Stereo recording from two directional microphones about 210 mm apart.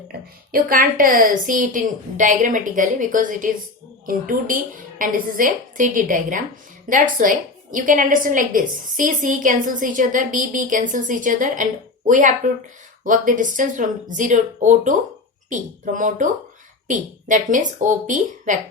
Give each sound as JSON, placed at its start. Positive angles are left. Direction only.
{"t": 0.5, "sound": "a woman's voice", "side_deg": -45}